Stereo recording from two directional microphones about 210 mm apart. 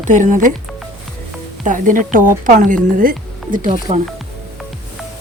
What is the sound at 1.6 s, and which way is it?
Speech, 40° right (ahead or behind).